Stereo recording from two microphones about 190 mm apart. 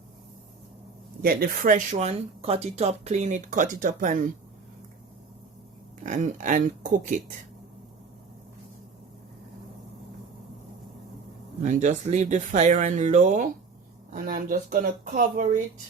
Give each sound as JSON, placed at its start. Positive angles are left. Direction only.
{"t": 1.2, "sound": "speech", "side_deg": -50}
{"t": 6.0, "sound": "speech", "side_deg": -40}
{"t": 11.6, "sound": "speech", "side_deg": -40}